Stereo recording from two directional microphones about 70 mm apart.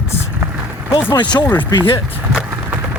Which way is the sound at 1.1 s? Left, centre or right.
Left.